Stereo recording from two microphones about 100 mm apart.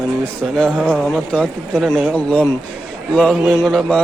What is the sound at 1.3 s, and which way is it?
A man's voice, 15° left (ahead or behind).